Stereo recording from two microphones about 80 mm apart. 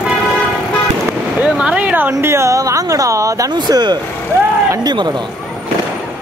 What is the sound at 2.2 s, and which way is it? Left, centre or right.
Speech, right.